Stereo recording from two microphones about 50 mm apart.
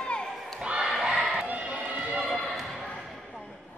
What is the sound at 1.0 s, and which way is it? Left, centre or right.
Crowd, centre.